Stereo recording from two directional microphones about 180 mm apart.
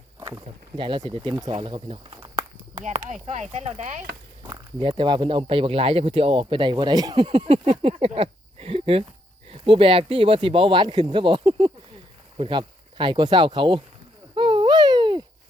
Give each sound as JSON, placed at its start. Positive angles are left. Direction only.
{"t": 0.3, "sound": "speech", "side_deg": -25}
{"t": 2.8, "sound": "speech", "side_deg": -40}
{"t": 4.4, "sound": "speech", "side_deg": -25}
{"t": 14.3, "sound": "a sound", "side_deg": -25}